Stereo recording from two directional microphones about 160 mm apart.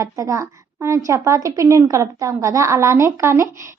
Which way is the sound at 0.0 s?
20° right (ahead or behind).